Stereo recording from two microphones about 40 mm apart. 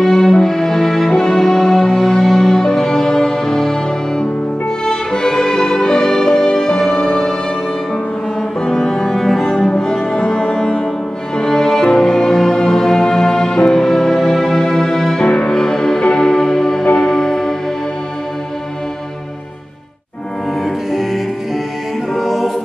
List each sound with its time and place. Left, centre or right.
0.0 s music: centre
8.6 s cello: centre
11.3 s music: centre
15.2 s music: left
15.5 s music: centre
20.9 s music: centre
22.1 s choir: centre